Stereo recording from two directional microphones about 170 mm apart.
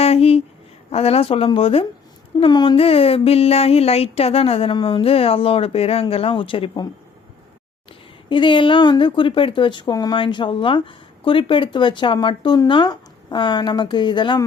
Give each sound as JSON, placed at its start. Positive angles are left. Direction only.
{"t": 0.0, "sound": "a sound", "side_deg": 35}
{"t": 0.9, "sound": "speech", "side_deg": 35}
{"t": 8.3, "sound": "speech", "side_deg": 30}